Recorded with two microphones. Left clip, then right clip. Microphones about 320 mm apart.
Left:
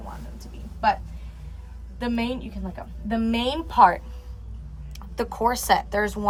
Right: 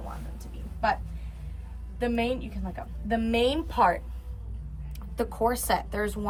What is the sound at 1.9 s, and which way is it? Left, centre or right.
A woman's voice, centre.